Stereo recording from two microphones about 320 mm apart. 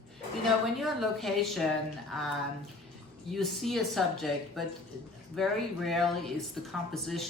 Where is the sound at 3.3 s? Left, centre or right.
Centre.